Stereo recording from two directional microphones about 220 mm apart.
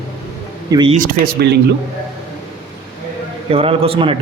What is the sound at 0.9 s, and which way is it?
Speech, 40° right (ahead or behind).